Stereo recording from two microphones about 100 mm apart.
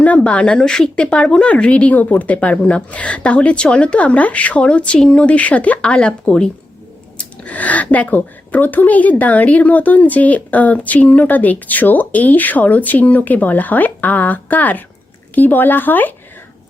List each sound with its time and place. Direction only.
0.0 s speech: 15° left (ahead or behind)